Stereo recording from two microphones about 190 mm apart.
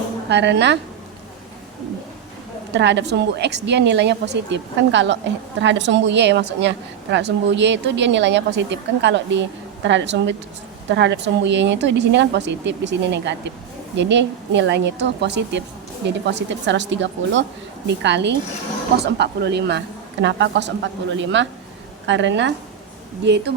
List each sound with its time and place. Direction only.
0.3 s a woman's voice: 65° right (ahead or behind)
2.7 s a woman's voice: 65° right (ahead or behind)